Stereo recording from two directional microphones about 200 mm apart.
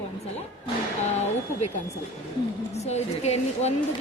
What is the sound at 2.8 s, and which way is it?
Speech, 35° left (ahead or behind).